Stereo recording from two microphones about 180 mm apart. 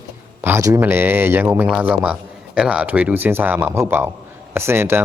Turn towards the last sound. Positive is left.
turn(degrees=-15)  # may be behind; listen again after turning